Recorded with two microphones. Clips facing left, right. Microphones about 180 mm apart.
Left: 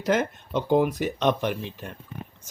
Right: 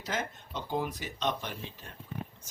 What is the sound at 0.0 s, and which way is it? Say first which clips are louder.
Speech: left 12 dB; 65° left (ahead or behind).